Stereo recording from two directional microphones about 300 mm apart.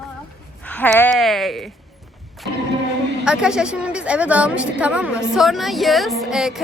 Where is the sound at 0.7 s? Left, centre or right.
Centre.